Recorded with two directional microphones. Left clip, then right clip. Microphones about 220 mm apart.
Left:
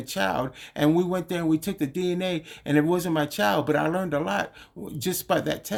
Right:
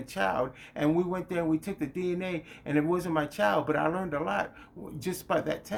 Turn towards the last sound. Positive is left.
turn(degrees=45)  # may be behind; listen again after turning